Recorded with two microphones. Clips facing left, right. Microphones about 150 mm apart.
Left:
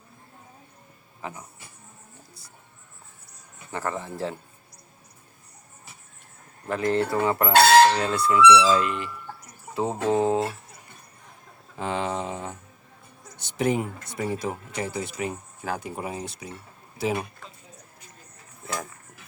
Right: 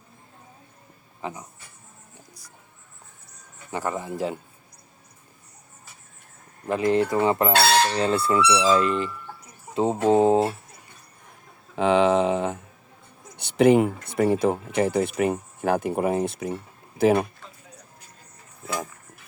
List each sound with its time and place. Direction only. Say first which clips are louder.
1.2 s speech: right 3 dB; 20° right (ahead or behind)
3.7 s speech: right 2 dB; 15° right (ahead or behind)
6.7 s chicken: right 3 dB; 15° right (ahead or behind)
7.9 s speech: right 1 dB; 30° right (ahead or behind)
9.7 s speech: right 4 dB; 15° right (ahead or behind)
10.2 s chicken: right 5 dB; 30° right (ahead or behind)
11.8 s speech: right 10 dB; 90° right
13.4 s speech: right 8 dB; 65° right (ahead or behind)